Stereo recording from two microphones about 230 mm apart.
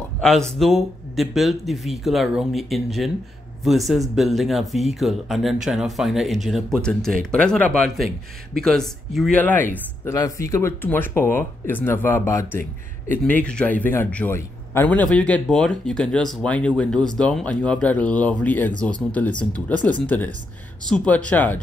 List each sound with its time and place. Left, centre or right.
0.6 s speech: centre